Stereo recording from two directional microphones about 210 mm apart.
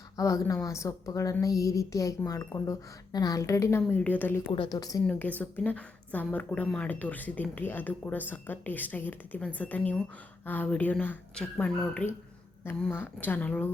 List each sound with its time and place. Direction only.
0.2 s a woman's voice: 15° left (ahead or behind)
4.5 s a woman's voice: 20° left (ahead or behind)
5.0 s a woman's voice: 5° left (ahead or behind)